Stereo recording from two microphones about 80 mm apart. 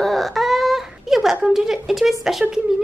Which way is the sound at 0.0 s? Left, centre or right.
Centre.